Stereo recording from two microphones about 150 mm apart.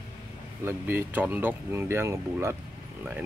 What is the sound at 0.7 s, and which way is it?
Speech, 15° right (ahead or behind).